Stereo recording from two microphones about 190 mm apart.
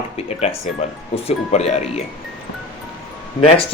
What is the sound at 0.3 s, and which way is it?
Speech, 30° left (ahead or behind).